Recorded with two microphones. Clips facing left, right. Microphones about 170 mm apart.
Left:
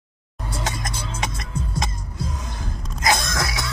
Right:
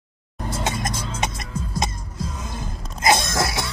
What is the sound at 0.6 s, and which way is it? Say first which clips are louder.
Music: right 3 dB; 25° right (ahead or behind).